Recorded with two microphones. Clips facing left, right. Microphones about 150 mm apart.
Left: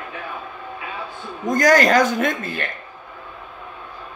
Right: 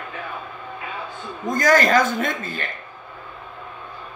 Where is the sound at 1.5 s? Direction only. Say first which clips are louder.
Left 2 dB; 45° left (ahead or behind).